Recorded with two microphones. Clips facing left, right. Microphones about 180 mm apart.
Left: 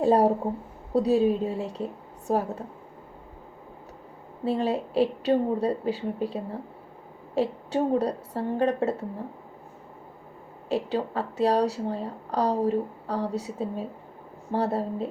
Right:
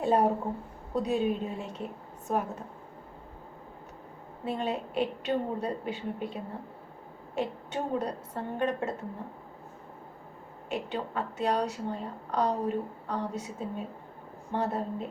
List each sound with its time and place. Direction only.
0.0 s a woman's voice: 35° left (ahead or behind)
4.4 s a woman's voice: 35° left (ahead or behind)
10.7 s a woman's voice: 35° left (ahead or behind)